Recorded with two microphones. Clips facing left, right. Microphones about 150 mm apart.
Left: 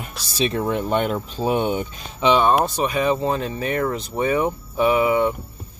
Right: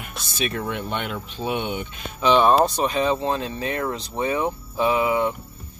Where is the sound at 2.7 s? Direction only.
10° left (ahead or behind).